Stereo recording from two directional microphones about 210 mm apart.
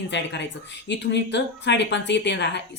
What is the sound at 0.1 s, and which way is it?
A woman's voice, 55° left (ahead or behind).